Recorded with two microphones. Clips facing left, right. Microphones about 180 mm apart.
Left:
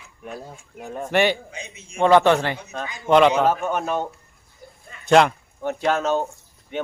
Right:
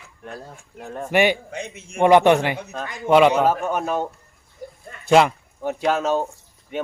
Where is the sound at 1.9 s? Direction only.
15° right (ahead or behind).